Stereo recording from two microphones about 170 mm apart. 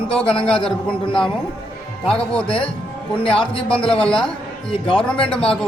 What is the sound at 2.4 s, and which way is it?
Speech, 30° left (ahead or behind).